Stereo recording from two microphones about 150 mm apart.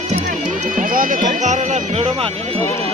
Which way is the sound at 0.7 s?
65° right (ahead or behind).